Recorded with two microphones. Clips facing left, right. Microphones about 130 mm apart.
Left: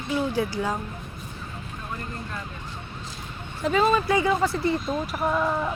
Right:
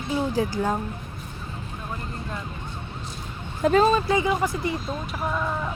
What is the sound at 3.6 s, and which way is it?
Speech, 40° right (ahead or behind).